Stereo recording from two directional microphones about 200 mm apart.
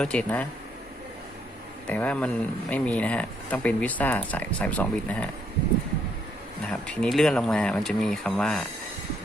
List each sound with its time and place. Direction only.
0.0 s speech: 5° left (ahead or behind)
1.9 s speech: 5° left (ahead or behind)
6.8 s speech: 5° left (ahead or behind)